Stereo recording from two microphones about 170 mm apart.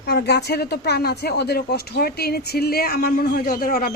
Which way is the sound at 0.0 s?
70° left (ahead or behind).